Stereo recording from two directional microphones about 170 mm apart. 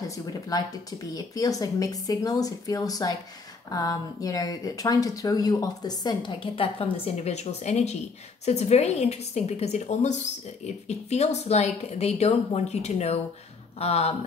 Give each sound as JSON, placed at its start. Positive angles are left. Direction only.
{"t": 0.3, "sound": "speech", "side_deg": 20}